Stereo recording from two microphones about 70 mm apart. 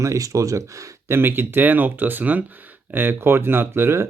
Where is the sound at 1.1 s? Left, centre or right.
Right.